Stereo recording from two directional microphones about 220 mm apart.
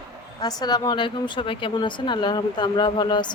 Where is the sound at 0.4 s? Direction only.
20° left (ahead or behind).